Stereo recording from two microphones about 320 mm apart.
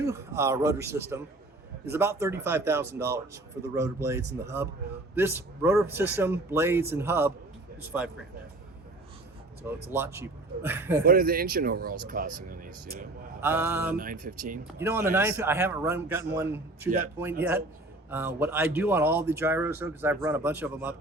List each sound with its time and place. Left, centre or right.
0.0 s speech: centre
9.6 s speech: centre
11.0 s speech: right
13.4 s speech: centre
13.9 s speech: right
14.8 s speech: centre